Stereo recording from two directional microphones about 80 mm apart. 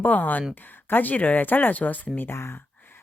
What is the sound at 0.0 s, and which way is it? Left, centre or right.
Speech, left.